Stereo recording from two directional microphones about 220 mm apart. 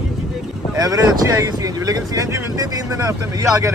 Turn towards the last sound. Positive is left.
turn(degrees=-15)  # may be behind; listen again after turning